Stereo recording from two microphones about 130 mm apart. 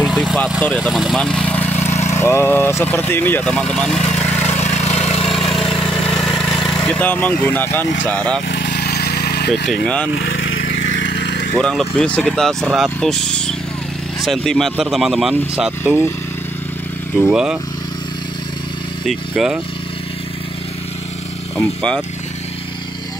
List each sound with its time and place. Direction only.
0.0 s vehicle: centre (ahead or behind); by 2.0 s 15° left (ahead or behind)
2.1 s speech: 20° left (ahead or behind)
4.5 s vehicle: 60° left (ahead or behind)
5.2 s vehicle: centre (ahead or behind)
6.0 s speech: centre (ahead or behind)
9.5 s speech: 5° left (ahead or behind)
11.6 s speech: 5° left (ahead or behind)
17.1 s speech: 10° right (ahead or behind)
19.0 s speech: centre (ahead or behind)
21.5 s speech: 5° left (ahead or behind)